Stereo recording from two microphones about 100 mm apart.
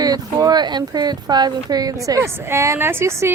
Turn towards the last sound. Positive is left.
turn(degrees=-25)  # may be behind; listen again after turning